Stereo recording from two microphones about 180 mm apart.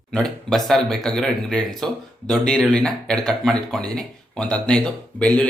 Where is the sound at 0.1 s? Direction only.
5° left (ahead or behind).